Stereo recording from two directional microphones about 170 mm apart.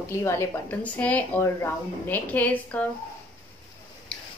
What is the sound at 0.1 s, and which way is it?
Speech, 15° left (ahead or behind).